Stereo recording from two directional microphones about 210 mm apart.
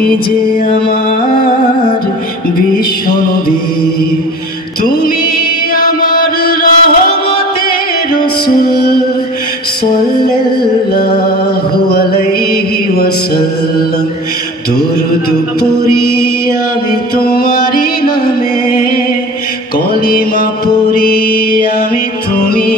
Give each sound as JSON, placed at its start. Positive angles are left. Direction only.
{"t": 5.8, "sound": "mantra", "side_deg": 40}
{"t": 11.9, "sound": "music", "side_deg": 45}
{"t": 17.2, "sound": "music", "side_deg": 45}
{"t": 20.1, "sound": "mantra", "side_deg": 45}
{"t": 22.5, "sound": "music", "side_deg": 45}